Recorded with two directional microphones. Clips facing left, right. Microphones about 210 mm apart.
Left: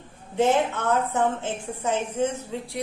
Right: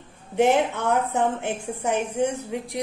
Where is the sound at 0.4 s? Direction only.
15° right (ahead or behind).